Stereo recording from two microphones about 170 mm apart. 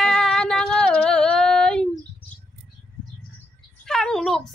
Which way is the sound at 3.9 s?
5° left (ahead or behind).